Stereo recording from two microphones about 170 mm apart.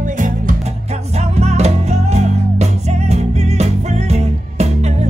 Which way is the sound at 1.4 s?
40° right (ahead or behind).